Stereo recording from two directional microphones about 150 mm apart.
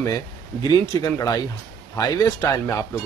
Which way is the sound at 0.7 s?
25° left (ahead or behind).